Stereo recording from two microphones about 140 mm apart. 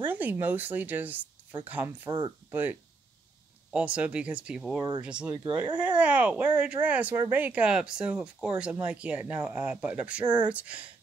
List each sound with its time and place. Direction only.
0.0 s speech: 15° right (ahead or behind)
2.0 s speech: 30° right (ahead or behind)
2.5 s speech: 15° right (ahead or behind)
4.7 s speech: 25° right (ahead or behind)
5.0 s speech: 10° right (ahead or behind)